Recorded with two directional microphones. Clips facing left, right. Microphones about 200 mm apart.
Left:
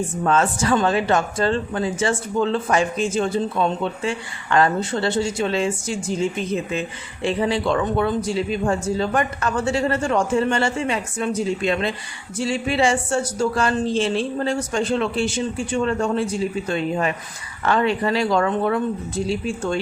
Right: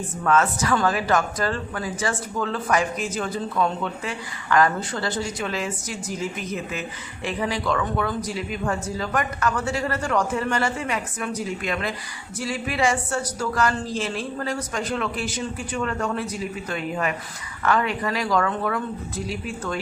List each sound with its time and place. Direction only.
0.3 s speech: 30° left (ahead or behind)